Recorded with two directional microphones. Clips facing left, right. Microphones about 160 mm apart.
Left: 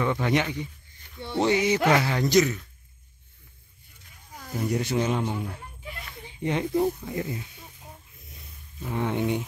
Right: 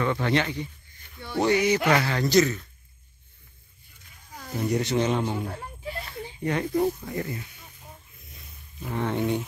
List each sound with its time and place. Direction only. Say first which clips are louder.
0.0 s speech: even; 15° left (ahead or behind)
4.4 s speech: right 1 dB; 5° left (ahead or behind)
5.9 s a sound: right 7 dB; 35° right (ahead or behind)
6.4 s speech: even; 20° left (ahead or behind)
9.0 s speech: even; 15° left (ahead or behind)